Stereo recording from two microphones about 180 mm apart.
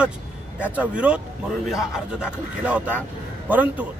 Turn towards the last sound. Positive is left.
turn(degrees=-10)  # may be behind; listen again after turning